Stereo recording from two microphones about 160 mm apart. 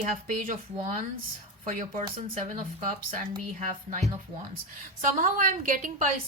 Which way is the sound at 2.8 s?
55° right (ahead or behind).